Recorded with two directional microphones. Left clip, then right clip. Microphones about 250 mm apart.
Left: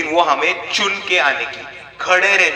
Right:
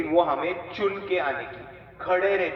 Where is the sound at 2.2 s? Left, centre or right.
Left.